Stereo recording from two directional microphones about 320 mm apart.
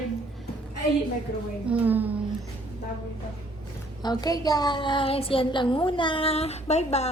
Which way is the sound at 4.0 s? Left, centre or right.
Centre.